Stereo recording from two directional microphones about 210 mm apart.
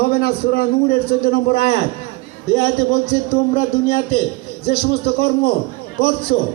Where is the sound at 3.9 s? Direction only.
45° left (ahead or behind).